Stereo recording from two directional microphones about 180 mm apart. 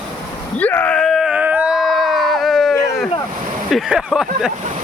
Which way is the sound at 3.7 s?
Centre (ahead or behind).